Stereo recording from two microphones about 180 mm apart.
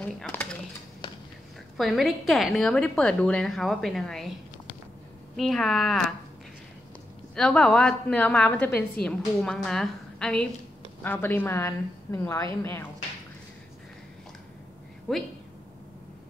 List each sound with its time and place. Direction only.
0.0 s a sound: 10° left (ahead or behind)
1.0 s a sound: 25° left (ahead or behind)
1.8 s a woman's voice: centre (ahead or behind)
5.3 s a woman's voice: centre (ahead or behind)
7.3 s a woman's voice: 5° left (ahead or behind)
15.1 s a woman's voice: 5° left (ahead or behind)